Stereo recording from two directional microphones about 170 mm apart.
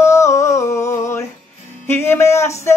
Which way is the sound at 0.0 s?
15° left (ahead or behind).